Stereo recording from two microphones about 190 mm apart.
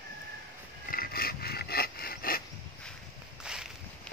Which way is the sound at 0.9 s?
50° left (ahead or behind).